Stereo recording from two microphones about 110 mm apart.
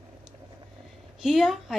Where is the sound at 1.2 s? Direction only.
Centre (ahead or behind).